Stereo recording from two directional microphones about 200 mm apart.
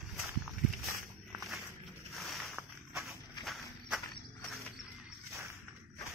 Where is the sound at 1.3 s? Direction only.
Centre (ahead or behind).